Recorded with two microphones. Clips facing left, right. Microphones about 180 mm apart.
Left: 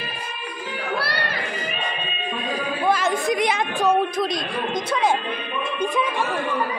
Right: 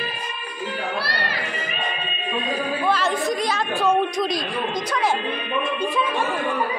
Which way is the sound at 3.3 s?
20° left (ahead or behind).